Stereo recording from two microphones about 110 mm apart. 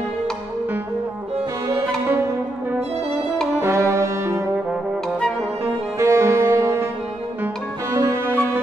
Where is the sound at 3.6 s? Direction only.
25° right (ahead or behind).